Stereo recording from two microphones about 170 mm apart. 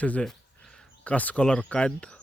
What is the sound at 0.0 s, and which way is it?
Speech, 10° left (ahead or behind).